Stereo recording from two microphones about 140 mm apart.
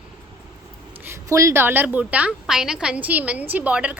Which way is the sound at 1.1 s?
20° right (ahead or behind).